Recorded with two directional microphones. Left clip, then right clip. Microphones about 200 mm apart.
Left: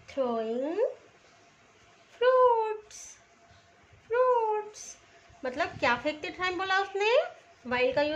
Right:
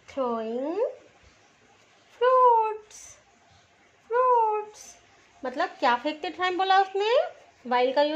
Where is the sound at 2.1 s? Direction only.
15° right (ahead or behind).